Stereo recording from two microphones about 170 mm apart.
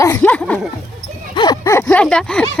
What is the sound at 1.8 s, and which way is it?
Speech, 5° left (ahead or behind).